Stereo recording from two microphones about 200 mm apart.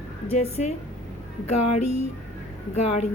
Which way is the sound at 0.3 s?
30° left (ahead or behind).